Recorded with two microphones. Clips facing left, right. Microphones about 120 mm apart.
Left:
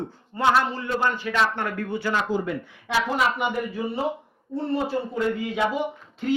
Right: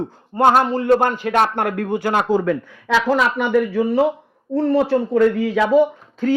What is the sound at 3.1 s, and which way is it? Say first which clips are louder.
Speech: right 6 dB; 90° right.